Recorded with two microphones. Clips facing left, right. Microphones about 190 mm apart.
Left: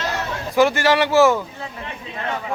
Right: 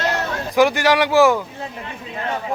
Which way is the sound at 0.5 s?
15° right (ahead or behind).